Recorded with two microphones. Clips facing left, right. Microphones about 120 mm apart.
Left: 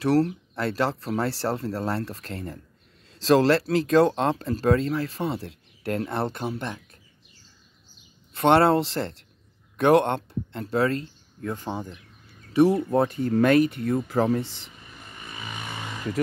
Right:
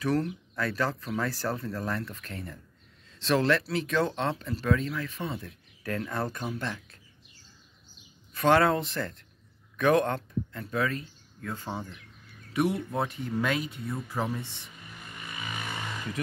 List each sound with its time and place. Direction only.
0.0 s speech: 35° left (ahead or behind); by 7.0 s 20° left (ahead or behind)
8.3 s speech: 30° left (ahead or behind)
11.4 s speech: 20° left (ahead or behind)
12.9 s speech: 45° left (ahead or behind); by 14.7 s 90° left